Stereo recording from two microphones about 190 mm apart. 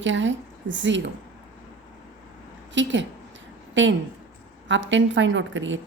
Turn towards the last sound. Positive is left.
turn(degrees=-80)